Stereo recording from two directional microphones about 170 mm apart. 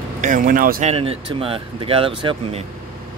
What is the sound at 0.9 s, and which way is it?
Speech, 35° right (ahead or behind).